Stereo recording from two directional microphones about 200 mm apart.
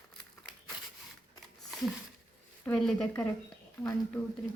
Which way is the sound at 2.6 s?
Centre (ahead or behind).